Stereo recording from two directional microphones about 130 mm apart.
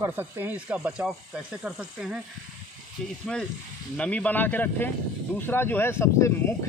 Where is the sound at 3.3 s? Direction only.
5° left (ahead or behind).